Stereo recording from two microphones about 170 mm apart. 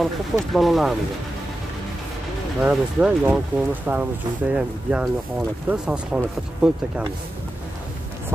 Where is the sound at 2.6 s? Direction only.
10° right (ahead or behind).